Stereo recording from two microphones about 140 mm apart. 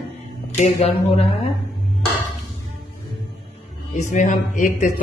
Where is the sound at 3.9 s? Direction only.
65° left (ahead or behind).